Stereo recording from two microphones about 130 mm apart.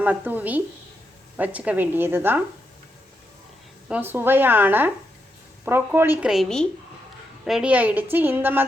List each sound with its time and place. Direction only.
0.0 s speech: 15° right (ahead or behind)
3.8 s speech: 10° right (ahead or behind)